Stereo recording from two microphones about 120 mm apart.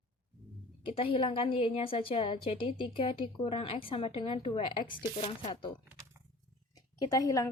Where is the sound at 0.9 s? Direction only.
50° left (ahead or behind).